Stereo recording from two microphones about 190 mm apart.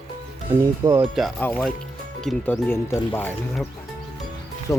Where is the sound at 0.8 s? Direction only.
20° right (ahead or behind).